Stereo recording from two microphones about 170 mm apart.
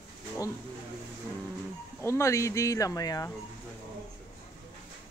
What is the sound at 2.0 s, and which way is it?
Speech, 15° left (ahead or behind).